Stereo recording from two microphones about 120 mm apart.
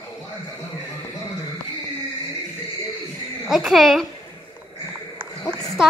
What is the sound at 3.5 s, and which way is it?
Speech, centre (ahead or behind).